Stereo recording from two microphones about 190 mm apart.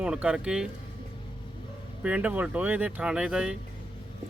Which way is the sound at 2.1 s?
10° right (ahead or behind).